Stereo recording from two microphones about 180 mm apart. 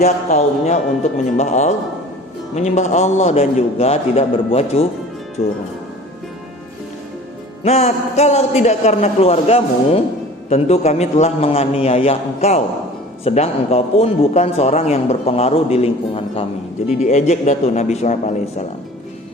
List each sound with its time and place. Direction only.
0.0 s a man's voice: 40° left (ahead or behind)
7.6 s a man's voice: 35° left (ahead or behind)